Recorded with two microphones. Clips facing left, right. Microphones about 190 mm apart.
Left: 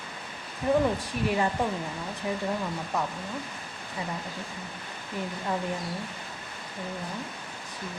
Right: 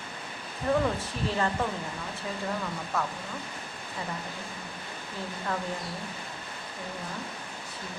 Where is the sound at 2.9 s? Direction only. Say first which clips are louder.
Left 1 dB; 15° left (ahead or behind).